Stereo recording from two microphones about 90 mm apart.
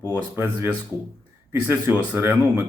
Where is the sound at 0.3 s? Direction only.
25° right (ahead or behind).